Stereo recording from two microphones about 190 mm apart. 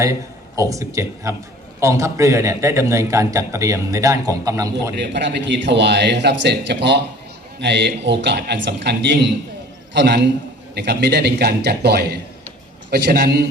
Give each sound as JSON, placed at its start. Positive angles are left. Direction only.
{"t": 0.0, "sound": "a man's voice", "side_deg": -15}
{"t": 4.9, "sound": "a man's voice", "side_deg": -65}